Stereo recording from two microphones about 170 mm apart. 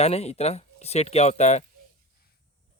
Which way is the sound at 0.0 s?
40° left (ahead or behind).